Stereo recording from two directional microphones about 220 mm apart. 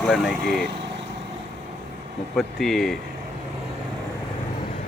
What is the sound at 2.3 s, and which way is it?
Speech, centre (ahead or behind).